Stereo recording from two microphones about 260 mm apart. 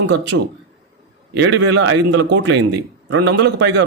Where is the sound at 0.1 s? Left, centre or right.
Right.